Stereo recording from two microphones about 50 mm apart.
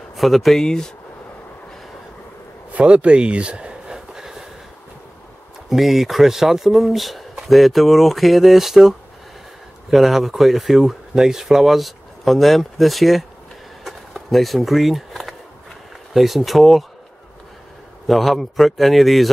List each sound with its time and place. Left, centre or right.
0.1 s speech: centre
0.6 s speech: centre
2.7 s a sound: right; by 4.5 s centre
5.7 s speech: centre
13.8 s a sound: centre
16.1 s speech: centre
18.0 s speech: centre